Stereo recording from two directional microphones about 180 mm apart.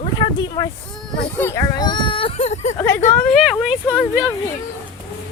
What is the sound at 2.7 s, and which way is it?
Speech, 15° left (ahead or behind).